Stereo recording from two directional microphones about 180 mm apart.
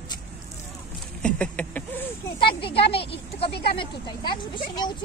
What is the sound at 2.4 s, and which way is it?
A woman's voice, 30° left (ahead or behind).